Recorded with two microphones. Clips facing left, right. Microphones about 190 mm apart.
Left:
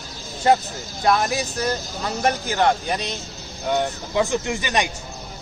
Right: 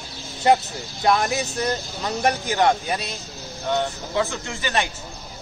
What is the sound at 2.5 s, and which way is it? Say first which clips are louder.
Speech: right 1 dB; 10° right (ahead or behind).